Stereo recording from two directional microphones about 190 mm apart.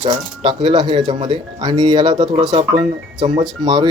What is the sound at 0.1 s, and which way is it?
Speech, 25° right (ahead or behind).